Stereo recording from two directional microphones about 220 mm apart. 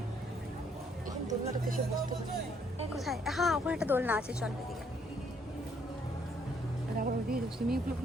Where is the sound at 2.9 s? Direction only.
Centre (ahead or behind).